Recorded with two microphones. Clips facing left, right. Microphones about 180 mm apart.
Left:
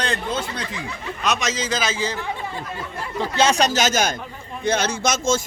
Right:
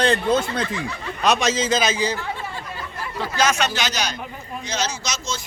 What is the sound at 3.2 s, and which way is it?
A man's voice, 25° left (ahead or behind).